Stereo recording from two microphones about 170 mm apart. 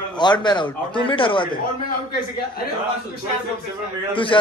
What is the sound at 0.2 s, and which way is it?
Speech, 25° left (ahead or behind).